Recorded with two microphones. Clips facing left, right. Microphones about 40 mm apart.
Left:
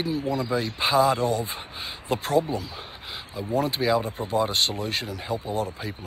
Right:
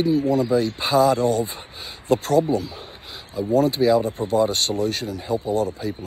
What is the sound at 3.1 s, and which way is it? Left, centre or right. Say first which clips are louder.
Speech: right 7 dB; left.